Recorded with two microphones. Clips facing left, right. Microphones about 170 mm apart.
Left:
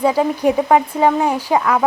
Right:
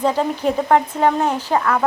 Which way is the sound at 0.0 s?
10° left (ahead or behind).